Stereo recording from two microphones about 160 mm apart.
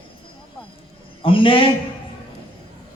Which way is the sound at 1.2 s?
35° left (ahead or behind).